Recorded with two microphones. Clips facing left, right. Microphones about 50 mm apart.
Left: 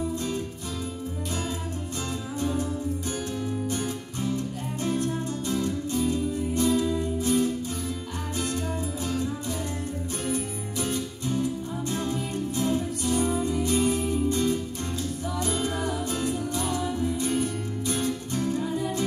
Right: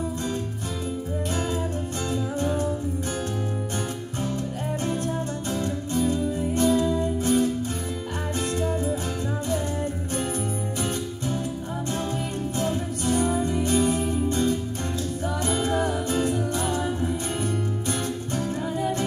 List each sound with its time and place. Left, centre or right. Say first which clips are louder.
2.4 s music: right 1 dB; right
4.3 s music: even; right
10.3 s music: right 2 dB; right
12.5 s music: left 1 dB; right